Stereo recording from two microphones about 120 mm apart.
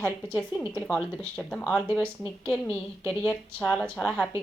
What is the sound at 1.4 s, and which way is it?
Speech, 10° left (ahead or behind).